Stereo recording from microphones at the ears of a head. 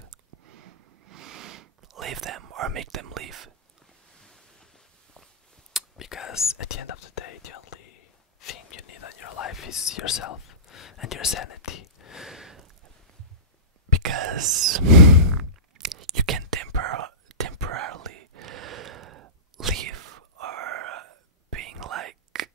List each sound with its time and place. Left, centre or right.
0.0 s a sound: right
5.9 s speech: left
14.0 s whispering: right